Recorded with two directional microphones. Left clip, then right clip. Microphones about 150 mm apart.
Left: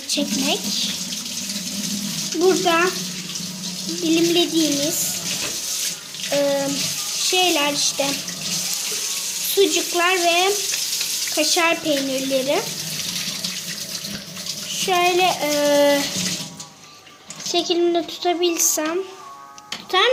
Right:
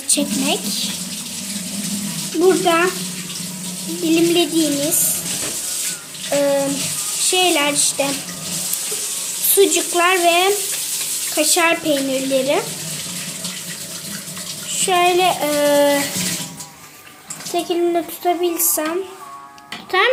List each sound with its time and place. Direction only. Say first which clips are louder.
0.1 s speech: right 2 dB; centre (ahead or behind)
2.4 s speech: right 3 dB; centre (ahead or behind)
4.0 s speech: right 2 dB; centre (ahead or behind)
6.3 s speech: right 3 dB; 5° right (ahead or behind)
9.6 s speech: right 3 dB; centre (ahead or behind)
14.7 s speech: right 3 dB; centre (ahead or behind)
17.9 s speech: right 2 dB; 5° left (ahead or behind)
19.9 s a child's voice: right 2 dB; 30° left (ahead or behind)